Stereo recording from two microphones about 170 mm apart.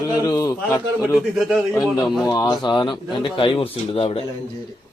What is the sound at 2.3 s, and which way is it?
Speech, 25° left (ahead or behind).